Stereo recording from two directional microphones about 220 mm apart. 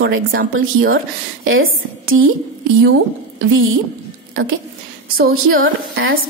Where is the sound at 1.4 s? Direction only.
65° right (ahead or behind).